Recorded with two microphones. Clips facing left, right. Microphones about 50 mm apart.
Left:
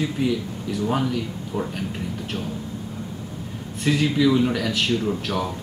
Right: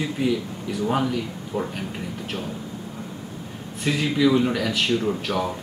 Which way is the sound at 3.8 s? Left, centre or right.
Centre.